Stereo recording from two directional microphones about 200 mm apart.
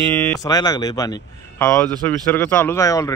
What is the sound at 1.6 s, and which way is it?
Speech, 5° left (ahead or behind).